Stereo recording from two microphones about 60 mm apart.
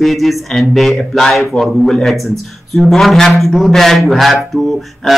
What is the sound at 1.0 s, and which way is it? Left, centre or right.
Speech, centre.